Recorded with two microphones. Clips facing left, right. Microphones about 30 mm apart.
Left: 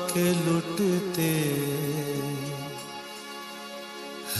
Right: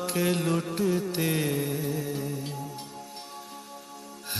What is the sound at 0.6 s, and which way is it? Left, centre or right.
Carnatic music, left.